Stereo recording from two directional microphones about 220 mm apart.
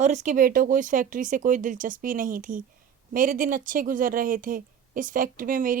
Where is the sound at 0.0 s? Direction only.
35° right (ahead or behind).